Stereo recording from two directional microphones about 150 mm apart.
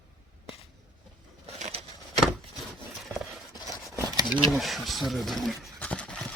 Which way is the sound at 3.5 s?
25° left (ahead or behind).